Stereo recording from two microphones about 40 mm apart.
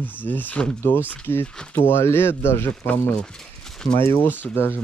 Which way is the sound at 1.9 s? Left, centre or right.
Left.